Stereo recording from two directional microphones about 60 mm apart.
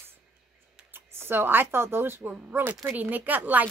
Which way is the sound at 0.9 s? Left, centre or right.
Right.